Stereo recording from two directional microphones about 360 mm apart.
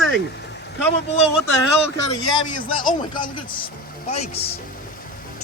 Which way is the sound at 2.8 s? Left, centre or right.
Left.